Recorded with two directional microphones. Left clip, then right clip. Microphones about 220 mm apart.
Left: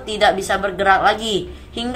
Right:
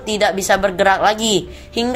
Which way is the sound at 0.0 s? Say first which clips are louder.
Left 1 dB; 40° right (ahead or behind).